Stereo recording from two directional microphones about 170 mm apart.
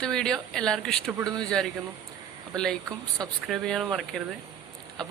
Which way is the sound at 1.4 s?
5° left (ahead or behind).